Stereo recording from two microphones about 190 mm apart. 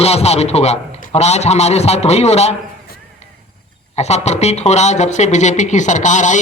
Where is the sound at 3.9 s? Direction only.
35° left (ahead or behind).